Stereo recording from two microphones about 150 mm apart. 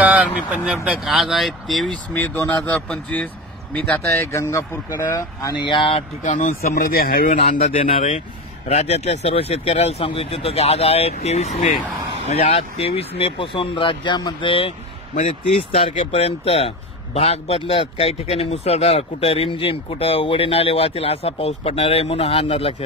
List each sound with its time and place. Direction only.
0.0 s speech: 10° right (ahead or behind)
2.1 s speech: 15° left (ahead or behind)
5.8 s a man's voice: 40° left (ahead or behind)
6.2 s speech: 55° left (ahead or behind); by 7.6 s 75° left (ahead or behind)
8.6 s a man's voice: 45° left (ahead or behind)